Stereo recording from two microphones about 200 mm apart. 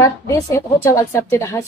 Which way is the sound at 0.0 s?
15° left (ahead or behind).